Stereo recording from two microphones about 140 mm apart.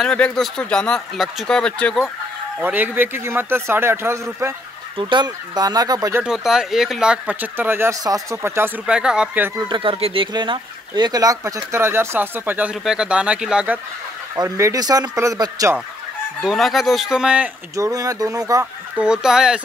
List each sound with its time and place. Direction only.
0.0 s speech: 5° left (ahead or behind)
2.6 s speech: 15° right (ahead or behind)
4.9 s speech: 30° right (ahead or behind)
6.2 s speech: 5° right (ahead or behind)
9.7 s speech: 40° right (ahead or behind); by 13.7 s 5° right (ahead or behind)
14.3 s speech: 25° right (ahead or behind)
16.4 s speech: centre (ahead or behind)
17.7 s speech: 25° right (ahead or behind)
18.9 s speech: 5° right (ahead or behind)